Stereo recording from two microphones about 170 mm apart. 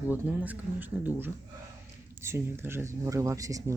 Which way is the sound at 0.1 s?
10° right (ahead or behind).